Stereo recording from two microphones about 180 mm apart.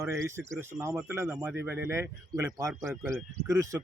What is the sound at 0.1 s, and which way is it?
A man's voice, 15° right (ahead or behind).